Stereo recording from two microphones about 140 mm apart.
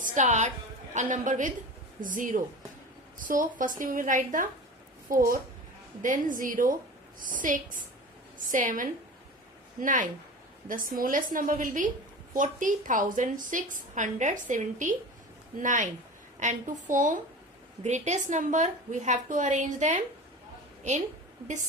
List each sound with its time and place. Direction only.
0.0 s a woman's voice: 60° right (ahead or behind)
5.0 s a woman's voice: 85° right
6.0 s a woman's voice: 70° right (ahead or behind)